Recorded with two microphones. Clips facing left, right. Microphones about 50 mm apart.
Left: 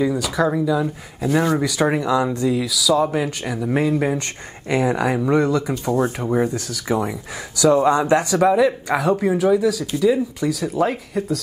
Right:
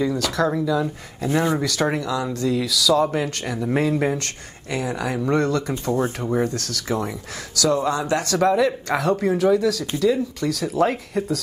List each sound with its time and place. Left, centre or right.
0.0 s speech: centre
4.6 s speech: left
5.2 s speech: centre